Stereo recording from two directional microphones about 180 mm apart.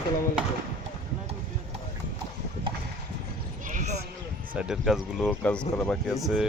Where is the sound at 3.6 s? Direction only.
40° right (ahead or behind).